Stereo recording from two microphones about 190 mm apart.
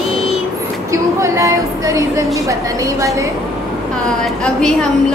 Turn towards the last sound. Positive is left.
turn(degrees=5)  # may be behind; listen again after turning